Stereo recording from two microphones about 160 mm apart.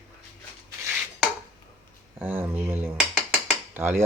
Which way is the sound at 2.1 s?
15° right (ahead or behind).